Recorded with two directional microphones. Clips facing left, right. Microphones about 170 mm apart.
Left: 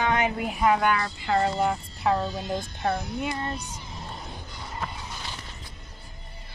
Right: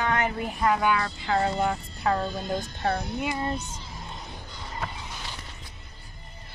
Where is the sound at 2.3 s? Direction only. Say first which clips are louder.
Even; 50° right (ahead or behind).